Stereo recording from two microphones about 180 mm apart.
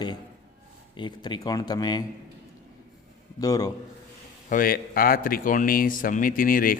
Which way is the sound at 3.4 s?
20° left (ahead or behind).